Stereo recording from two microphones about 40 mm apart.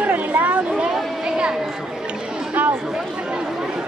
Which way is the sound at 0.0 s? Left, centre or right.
Right.